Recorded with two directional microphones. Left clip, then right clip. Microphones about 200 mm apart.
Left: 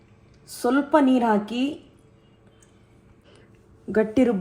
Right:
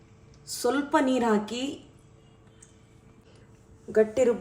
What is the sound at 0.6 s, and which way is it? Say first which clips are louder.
Speech: left 5 dB; 25° left (ahead or behind).